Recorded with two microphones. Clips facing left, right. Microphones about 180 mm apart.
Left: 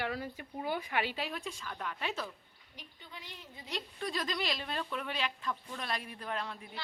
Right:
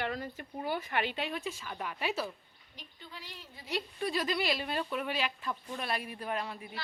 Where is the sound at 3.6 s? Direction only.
5° right (ahead or behind).